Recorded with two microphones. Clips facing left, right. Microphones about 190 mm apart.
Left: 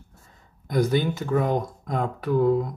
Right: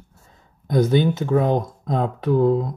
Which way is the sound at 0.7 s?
25° right (ahead or behind).